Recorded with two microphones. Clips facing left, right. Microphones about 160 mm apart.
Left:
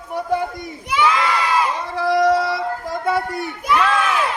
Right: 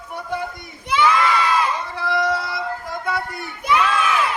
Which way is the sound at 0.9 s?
10° left (ahead or behind).